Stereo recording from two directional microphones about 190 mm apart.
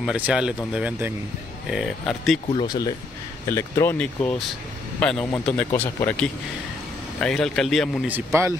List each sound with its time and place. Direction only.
0.0 s speech: 5° right (ahead or behind)
2.5 s speech: 20° left (ahead or behind); by 8.1 s centre (ahead or behind)
8.1 s a man's voice: 15° right (ahead or behind)